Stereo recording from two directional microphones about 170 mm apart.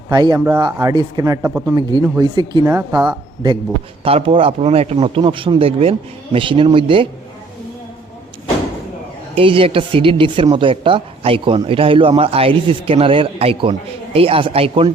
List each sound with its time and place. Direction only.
0.1 s speech: 25° right (ahead or behind)
1.4 s speech: 10° right (ahead or behind)
4.0 s speech: 35° right (ahead or behind)
9.3 s speech: 30° right (ahead or behind)